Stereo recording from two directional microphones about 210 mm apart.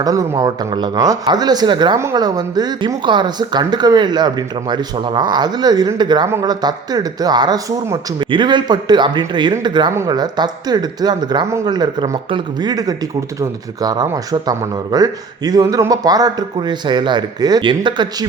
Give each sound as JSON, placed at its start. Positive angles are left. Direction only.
{"t": 0.0, "sound": "speech", "side_deg": -15}